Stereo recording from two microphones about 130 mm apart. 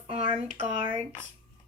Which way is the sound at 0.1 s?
50° right (ahead or behind).